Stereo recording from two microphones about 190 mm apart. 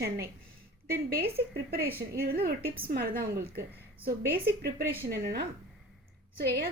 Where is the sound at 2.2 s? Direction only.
55° right (ahead or behind).